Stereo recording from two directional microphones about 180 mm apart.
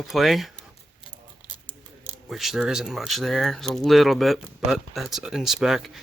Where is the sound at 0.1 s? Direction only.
Centre (ahead or behind).